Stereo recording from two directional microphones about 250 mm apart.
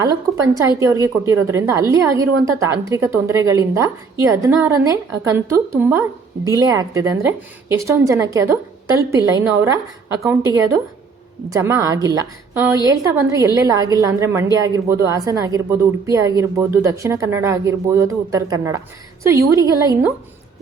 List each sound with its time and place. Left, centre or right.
0.0 s a woman's voice: centre
11.4 s a woman's voice: centre